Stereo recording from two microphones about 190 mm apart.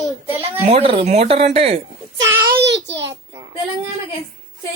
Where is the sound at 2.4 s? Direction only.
65° right (ahead or behind).